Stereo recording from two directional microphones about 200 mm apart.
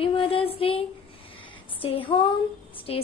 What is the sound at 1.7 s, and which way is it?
Female singing, 25° left (ahead or behind).